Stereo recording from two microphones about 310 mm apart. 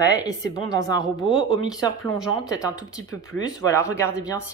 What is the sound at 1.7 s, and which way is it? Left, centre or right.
Speech, centre.